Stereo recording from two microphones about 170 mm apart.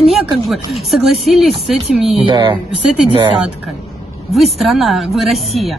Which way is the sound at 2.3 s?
30° right (ahead or behind).